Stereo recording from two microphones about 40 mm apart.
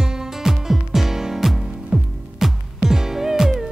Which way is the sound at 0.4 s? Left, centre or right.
Centre.